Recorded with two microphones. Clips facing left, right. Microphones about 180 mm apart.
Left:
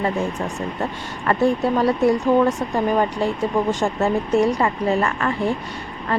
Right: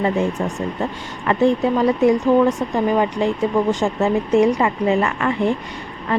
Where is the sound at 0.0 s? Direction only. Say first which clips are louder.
Right 3 dB; 15° right (ahead or behind).